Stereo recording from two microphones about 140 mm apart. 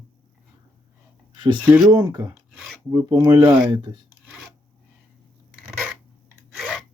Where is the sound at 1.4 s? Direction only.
35° right (ahead or behind).